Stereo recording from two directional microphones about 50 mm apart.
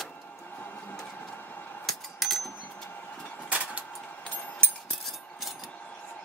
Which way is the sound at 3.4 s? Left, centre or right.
Right.